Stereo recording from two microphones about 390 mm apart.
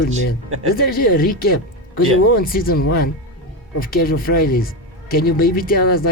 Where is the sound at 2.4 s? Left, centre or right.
Left.